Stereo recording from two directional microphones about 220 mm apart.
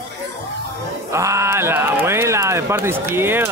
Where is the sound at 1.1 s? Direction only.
15° right (ahead or behind).